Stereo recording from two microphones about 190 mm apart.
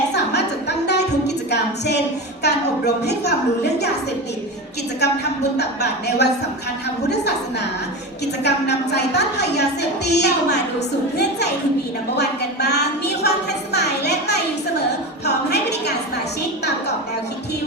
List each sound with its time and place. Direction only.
0.1 s music: 65° left (ahead or behind)
1.5 s a sound: 60° left (ahead or behind)
2.4 s a woman's voice: 60° left (ahead or behind)
5.5 s a woman's voice: 60° left (ahead or behind)
8.4 s a woman's voice: 60° left (ahead or behind)
13.7 s a sound: 60° left (ahead or behind)
15.2 s a woman's voice: 60° left (ahead or behind)